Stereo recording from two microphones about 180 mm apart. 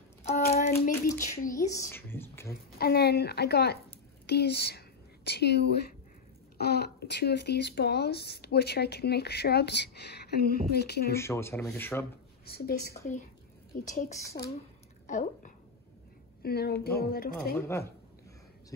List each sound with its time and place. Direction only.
0.5 s hands: 50° left (ahead or behind)
1.5 s a woman's voice: 15° left (ahead or behind)
2.8 s a woman's voice: 60° left (ahead or behind)
11.1 s a woman's voice: 15° left (ahead or behind)
12.4 s a woman's voice: 60° left (ahead or behind)
13.8 s a woman's voice: 45° left (ahead or behind)
14.2 s a woman's voice: 15° left (ahead or behind)
15.0 s a woman's voice: 45° left (ahead or behind)
16.4 s speech: 60° left (ahead or behind)
17.6 s a woman's voice: 15° left (ahead or behind)